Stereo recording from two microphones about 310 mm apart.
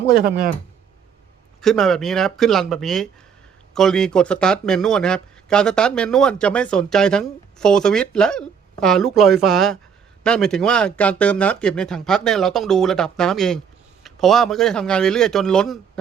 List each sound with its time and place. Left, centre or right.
0.2 s speech: right
1.6 s speech: centre